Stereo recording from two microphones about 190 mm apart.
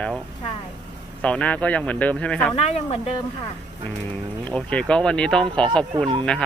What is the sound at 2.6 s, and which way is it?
Speech, 35° left (ahead or behind).